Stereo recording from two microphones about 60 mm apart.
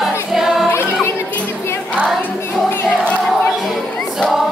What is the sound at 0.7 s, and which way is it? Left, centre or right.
Music, left.